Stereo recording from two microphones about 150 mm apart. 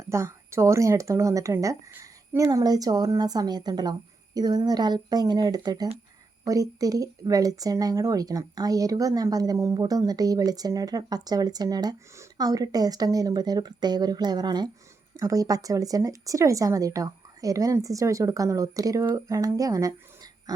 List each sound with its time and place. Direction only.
0.1 s a woman's voice: 20° right (ahead or behind)